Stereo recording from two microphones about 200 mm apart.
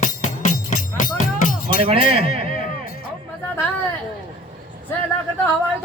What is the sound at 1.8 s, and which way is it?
Speech, 30° right (ahead or behind).